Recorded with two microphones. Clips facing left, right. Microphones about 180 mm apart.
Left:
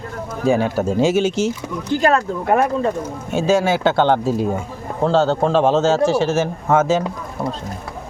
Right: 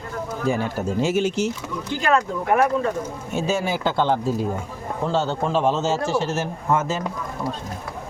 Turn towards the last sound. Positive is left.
turn(degrees=90)